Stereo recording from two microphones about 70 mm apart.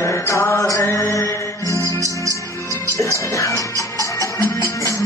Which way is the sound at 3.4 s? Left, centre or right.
Left.